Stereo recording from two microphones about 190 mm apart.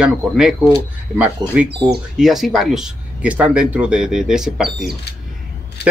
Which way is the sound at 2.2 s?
Centre (ahead or behind).